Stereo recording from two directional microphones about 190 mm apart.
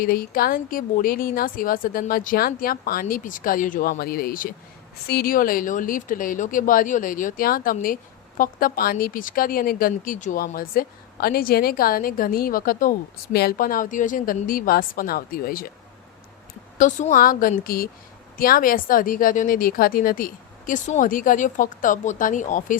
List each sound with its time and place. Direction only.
0.0 s speech: 50° left (ahead or behind)
16.7 s speech: 40° left (ahead or behind)